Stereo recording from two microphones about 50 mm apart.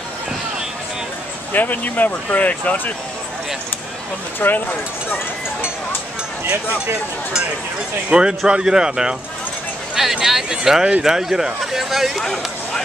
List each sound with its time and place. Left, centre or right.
1.5 s speech: left
4.4 s speech: left
8.1 s speech: centre
12.2 s a sound: centre